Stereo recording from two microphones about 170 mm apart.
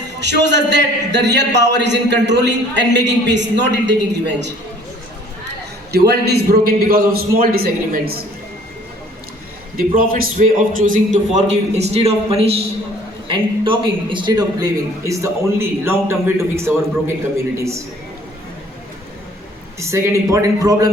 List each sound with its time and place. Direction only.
0.2 s a man's voice: 90° right
5.9 s a man's voice: 70° right (ahead or behind)
9.7 s a man's voice: 55° right (ahead or behind); by 17.7 s 15° right (ahead or behind)
19.8 s a man's voice: 20° right (ahead or behind)